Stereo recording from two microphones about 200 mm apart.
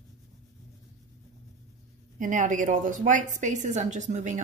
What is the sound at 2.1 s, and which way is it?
A woman's voice, 40° right (ahead or behind).